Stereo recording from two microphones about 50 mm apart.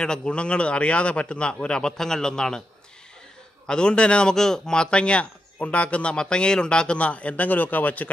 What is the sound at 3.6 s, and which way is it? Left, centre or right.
A man's voice, centre.